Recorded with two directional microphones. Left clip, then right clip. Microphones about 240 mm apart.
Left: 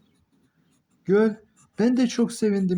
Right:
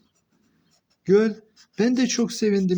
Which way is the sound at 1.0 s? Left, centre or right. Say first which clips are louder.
Right 2 dB; centre.